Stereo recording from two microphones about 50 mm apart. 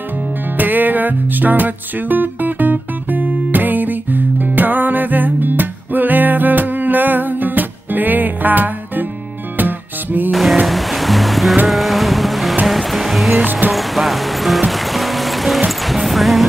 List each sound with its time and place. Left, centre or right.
0.6 s music: right
10.3 s a sound: centre
10.7 s music: centre
11.6 s boat: centre
12.6 s music: centre